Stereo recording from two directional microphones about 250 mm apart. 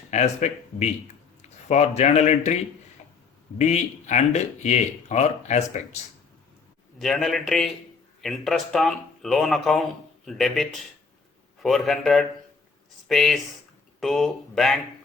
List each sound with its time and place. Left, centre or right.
0.1 s speech: left
3.6 s speech: left
7.0 s speech: centre